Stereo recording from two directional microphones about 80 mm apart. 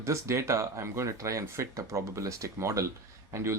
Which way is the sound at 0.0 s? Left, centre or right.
Right.